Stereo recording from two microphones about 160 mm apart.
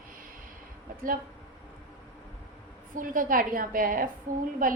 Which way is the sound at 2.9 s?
60° right (ahead or behind).